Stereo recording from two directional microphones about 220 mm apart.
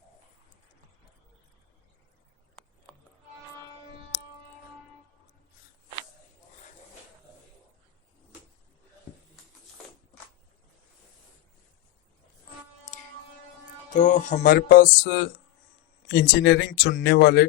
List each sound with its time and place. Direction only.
12.9 s hum: 35° left (ahead or behind)
13.9 s music: 35° left (ahead or behind)
16.0 s speech: 45° left (ahead or behind)